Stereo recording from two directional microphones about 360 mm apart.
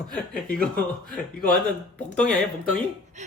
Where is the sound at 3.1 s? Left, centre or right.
Centre.